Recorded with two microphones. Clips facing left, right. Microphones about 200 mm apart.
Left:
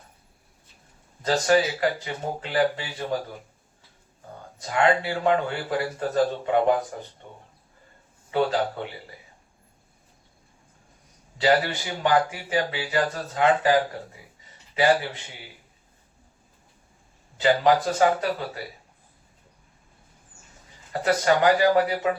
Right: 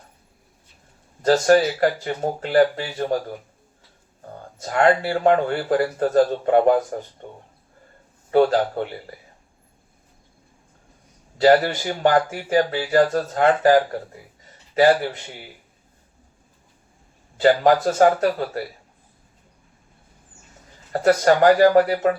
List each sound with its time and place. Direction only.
1.2 s speech: 45° right (ahead or behind)
4.6 s speech: 45° right (ahead or behind)
7.2 s a sound: 50° right (ahead or behind)
8.3 s speech: 45° right (ahead or behind)
11.3 s speech: 45° right (ahead or behind)
17.4 s speech: 45° right (ahead or behind)
21.0 s speech: 50° right (ahead or behind)